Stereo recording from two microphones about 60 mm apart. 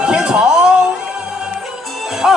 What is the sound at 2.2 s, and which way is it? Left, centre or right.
Speech, centre.